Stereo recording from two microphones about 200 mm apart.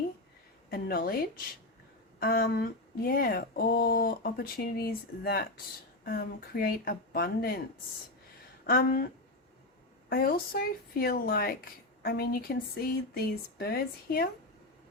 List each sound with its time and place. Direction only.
0.7 s speech: 45° left (ahead or behind)
8.6 s speech: 50° left (ahead or behind)
10.1 s speech: 45° left (ahead or behind)